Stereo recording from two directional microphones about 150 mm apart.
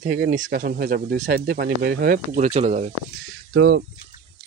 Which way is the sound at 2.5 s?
50° right (ahead or behind).